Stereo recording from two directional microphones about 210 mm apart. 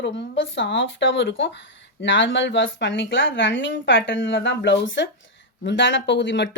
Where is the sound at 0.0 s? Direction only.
55° left (ahead or behind).